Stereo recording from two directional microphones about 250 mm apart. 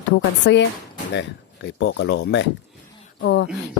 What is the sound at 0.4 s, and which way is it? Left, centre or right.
Speech, left.